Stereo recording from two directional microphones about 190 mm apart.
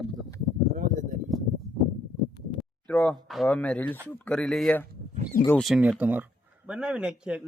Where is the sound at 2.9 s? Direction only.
5° left (ahead or behind).